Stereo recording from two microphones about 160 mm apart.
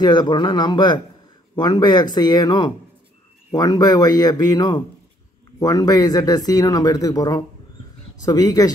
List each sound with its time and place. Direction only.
0.0 s speech: 25° left (ahead or behind)